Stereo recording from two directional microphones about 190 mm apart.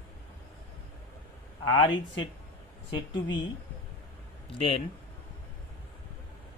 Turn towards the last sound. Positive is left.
turn(degrees=30)  # may be behind; listen again after turning